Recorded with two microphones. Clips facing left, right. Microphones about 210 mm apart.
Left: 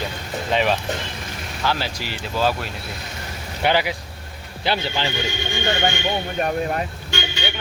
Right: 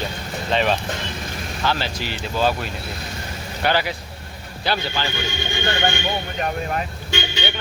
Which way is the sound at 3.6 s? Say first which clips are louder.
Left 1 dB; 15° left (ahead or behind).